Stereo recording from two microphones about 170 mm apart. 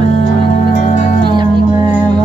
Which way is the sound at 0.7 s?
45° left (ahead or behind).